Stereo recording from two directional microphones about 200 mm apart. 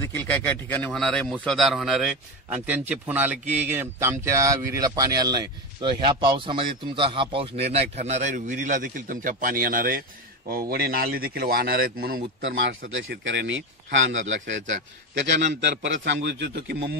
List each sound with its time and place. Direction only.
0.0 s a man's voice: 10° left (ahead or behind); by 12.2 s 50° right (ahead or behind)
12.4 s a man's voice: 70° right (ahead or behind)